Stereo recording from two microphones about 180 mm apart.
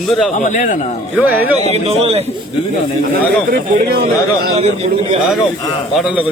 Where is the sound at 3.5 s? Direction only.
60° right (ahead or behind).